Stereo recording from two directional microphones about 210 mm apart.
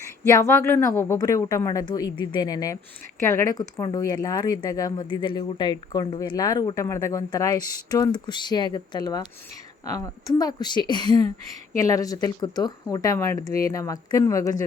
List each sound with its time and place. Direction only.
0.3 s a woman's voice: 15° left (ahead or behind)